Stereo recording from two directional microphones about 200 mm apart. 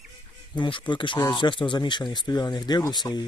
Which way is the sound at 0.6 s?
25° left (ahead or behind).